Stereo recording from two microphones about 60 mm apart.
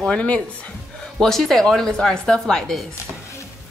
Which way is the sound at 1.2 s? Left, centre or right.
Centre.